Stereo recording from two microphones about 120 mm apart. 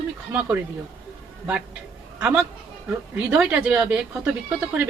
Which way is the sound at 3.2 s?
15° right (ahead or behind).